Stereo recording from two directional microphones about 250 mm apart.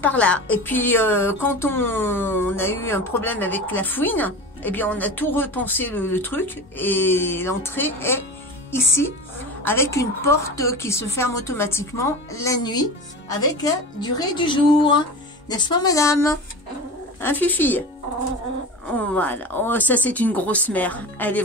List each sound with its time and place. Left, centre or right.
0.0 s speech: centre
9.7 s speech: centre
18.9 s speech: centre